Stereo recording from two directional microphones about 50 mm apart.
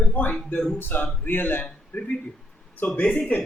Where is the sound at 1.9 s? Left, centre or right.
Left.